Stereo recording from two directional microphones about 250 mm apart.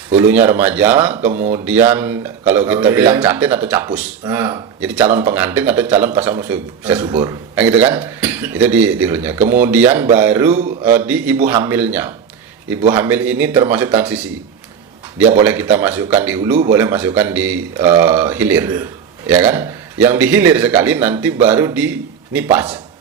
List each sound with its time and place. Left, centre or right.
0.2 s speech: centre
1.3 s a man's voice: right
1.5 s speech: centre
7.1 s a man's voice: right
7.5 s speech: centre
15.4 s speech: centre